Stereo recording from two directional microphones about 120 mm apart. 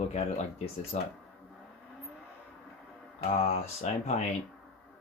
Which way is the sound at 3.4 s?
65° left (ahead or behind).